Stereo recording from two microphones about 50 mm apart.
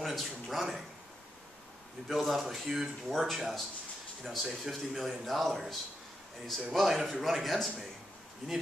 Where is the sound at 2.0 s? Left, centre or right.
Centre.